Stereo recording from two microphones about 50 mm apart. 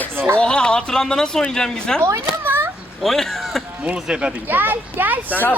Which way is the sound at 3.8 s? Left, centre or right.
Right.